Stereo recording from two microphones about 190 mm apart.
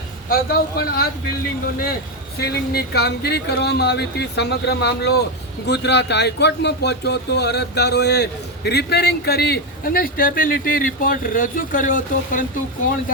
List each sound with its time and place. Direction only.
0.3 s speech: 50° left (ahead or behind)
2.4 s speech: 55° left (ahead or behind)